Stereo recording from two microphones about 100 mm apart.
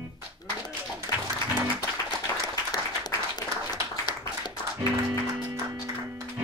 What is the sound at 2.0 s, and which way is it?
Applause, 40° left (ahead or behind).